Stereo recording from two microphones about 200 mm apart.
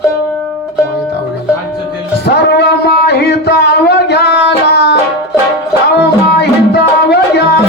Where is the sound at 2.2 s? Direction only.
55° left (ahead or behind).